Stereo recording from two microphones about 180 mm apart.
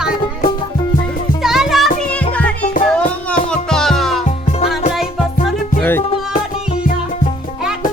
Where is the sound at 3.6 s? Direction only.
5° left (ahead or behind).